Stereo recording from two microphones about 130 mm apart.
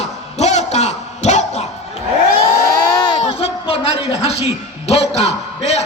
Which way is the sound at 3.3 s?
45° left (ahead or behind).